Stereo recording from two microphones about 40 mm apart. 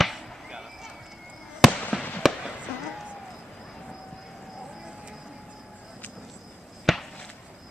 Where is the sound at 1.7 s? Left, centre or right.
Left.